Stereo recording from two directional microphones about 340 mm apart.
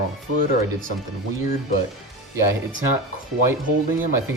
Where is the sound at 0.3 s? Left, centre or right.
Right.